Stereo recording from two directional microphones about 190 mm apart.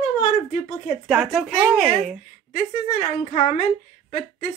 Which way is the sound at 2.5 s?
35° left (ahead or behind).